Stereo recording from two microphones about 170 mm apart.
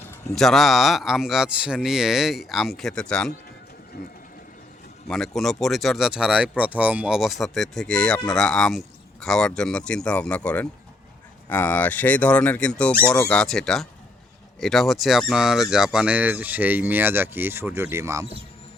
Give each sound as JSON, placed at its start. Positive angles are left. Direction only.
{"t": 0.3, "sound": "speech", "side_deg": 0}
{"t": 3.9, "sound": "a sound", "side_deg": 65}
{"t": 5.0, "sound": "speech", "side_deg": 0}